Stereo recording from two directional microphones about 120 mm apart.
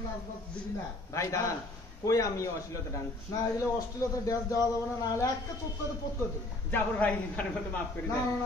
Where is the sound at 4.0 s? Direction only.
30° left (ahead or behind).